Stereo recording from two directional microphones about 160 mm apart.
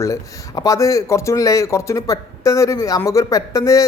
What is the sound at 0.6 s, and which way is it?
Speech, 20° left (ahead or behind).